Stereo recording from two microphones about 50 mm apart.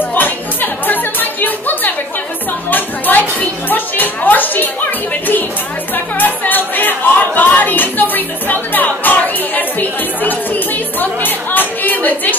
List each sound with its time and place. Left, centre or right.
0.1 s music: left
6.1 s music: left